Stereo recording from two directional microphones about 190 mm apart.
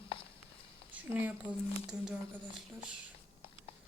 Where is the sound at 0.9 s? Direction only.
10° right (ahead or behind).